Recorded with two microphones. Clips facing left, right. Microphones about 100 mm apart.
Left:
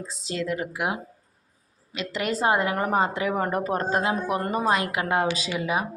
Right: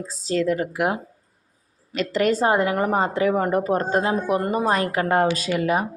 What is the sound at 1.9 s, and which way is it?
Speech, 40° right (ahead or behind).